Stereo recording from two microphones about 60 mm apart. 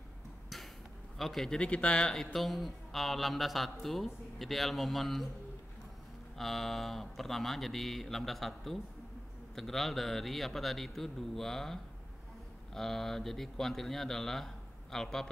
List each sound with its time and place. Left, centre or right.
1.1 s a man's voice: centre
1.6 s speech: centre
2.1 s a man's voice: centre
6.3 s a man's voice: centre